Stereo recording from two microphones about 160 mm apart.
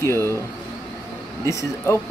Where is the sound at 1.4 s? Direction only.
20° left (ahead or behind).